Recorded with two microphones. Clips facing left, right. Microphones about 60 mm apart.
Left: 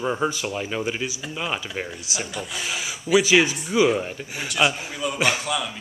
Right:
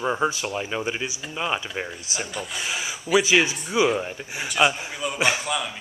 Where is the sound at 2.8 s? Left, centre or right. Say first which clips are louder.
Even; right.